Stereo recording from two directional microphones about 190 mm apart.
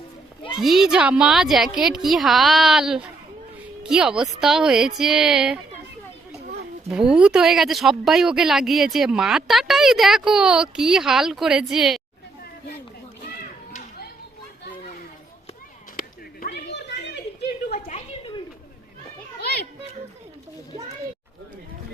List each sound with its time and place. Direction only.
0.6 s a woman's voice: centre (ahead or behind)
6.9 s a woman's voice: 5° right (ahead or behind)
14.7 s children playing: 45° left (ahead or behind)
16.0 s a sound: 55° left (ahead or behind)
17.7 s a sound: 35° left (ahead or behind)
19.4 s children playing: 55° left (ahead or behind)